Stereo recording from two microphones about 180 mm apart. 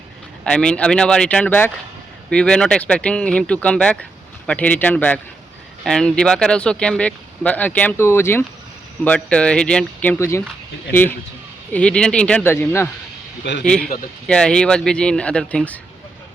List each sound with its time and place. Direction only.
0.4 s speech: 5° left (ahead or behind)
11.7 s speech: 5° left (ahead or behind)
13.5 s speech: 85° left
14.3 s speech: 5° left (ahead or behind)